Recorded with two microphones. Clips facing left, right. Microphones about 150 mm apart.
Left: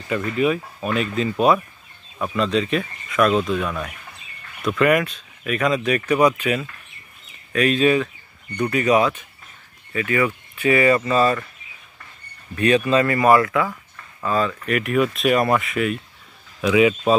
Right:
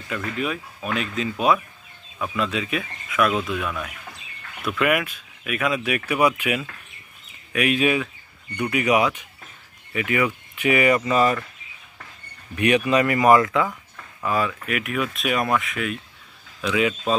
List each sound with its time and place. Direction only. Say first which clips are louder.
0.1 s speech: left 7 dB; centre (ahead or behind)
2.3 s speech: left 5 dB; 5° right (ahead or behind)
12.5 s a man's voice: left 2 dB; 15° right (ahead or behind); by 16.9 s 5° left (ahead or behind)